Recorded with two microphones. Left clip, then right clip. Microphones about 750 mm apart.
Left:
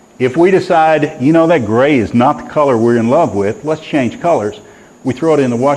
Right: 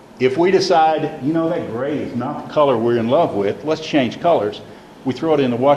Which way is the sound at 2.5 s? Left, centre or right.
Left.